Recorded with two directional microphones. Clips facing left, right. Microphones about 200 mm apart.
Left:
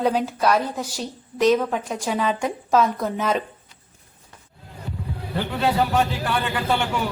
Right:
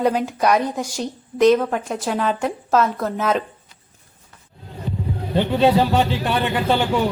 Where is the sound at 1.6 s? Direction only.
Centre (ahead or behind).